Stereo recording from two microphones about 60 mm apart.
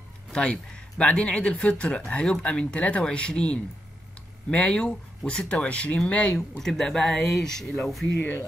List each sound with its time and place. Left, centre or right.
0.3 s speech: centre
6.6 s speech: centre